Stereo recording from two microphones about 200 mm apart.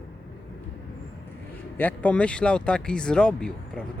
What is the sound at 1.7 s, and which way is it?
Speech, 10° left (ahead or behind).